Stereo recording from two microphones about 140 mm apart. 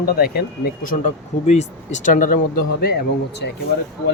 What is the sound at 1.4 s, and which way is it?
Speech, 55° left (ahead or behind).